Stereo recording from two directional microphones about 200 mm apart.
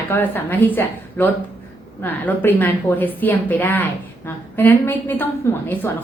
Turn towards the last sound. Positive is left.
turn(degrees=10)  # may be behind; listen again after turning